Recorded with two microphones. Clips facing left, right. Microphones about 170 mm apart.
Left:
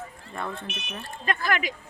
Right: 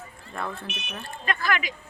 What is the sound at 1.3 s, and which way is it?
Speech, 45° left (ahead or behind).